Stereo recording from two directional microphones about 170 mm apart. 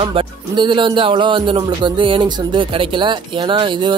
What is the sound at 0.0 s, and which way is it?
Speech, 30° right (ahead or behind).